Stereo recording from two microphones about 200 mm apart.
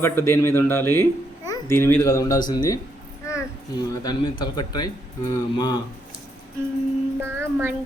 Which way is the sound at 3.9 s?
20° left (ahead or behind).